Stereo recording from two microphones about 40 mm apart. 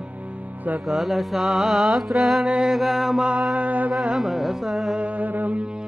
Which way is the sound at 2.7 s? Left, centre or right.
Centre.